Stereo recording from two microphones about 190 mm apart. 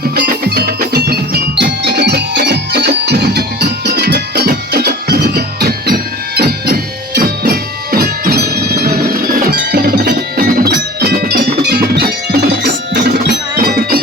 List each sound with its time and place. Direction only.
0.2 s music: 55° right (ahead or behind)
8.9 s music: 45° right (ahead or behind)